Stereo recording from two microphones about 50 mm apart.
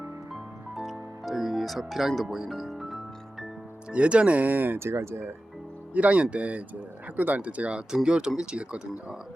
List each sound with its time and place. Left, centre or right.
0.8 s music: centre
3.9 s speech: right
4.8 s speech: right
5.9 s speech: right